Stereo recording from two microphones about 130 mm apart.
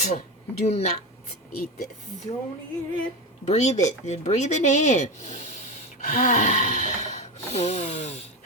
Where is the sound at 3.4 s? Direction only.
60° left (ahead or behind).